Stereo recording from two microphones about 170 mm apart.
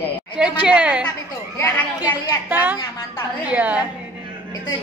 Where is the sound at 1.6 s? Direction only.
20° left (ahead or behind).